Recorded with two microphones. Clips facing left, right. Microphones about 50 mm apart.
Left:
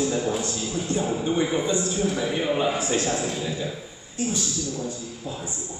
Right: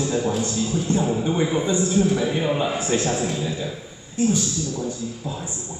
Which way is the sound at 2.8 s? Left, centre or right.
Right.